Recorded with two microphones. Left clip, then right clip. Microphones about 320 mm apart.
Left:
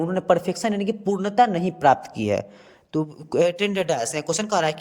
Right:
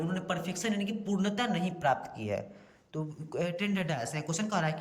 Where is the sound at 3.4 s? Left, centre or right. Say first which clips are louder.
Left 13 dB; centre.